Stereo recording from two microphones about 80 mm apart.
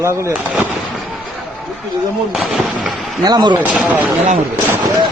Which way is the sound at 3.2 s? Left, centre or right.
Right.